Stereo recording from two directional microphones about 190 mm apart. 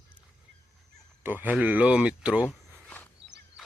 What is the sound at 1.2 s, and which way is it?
Speech, 10° right (ahead or behind).